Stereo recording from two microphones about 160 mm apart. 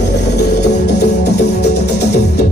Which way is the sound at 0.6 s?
90° left.